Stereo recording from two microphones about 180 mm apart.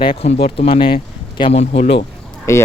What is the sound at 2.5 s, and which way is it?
Speech, 15° left (ahead or behind).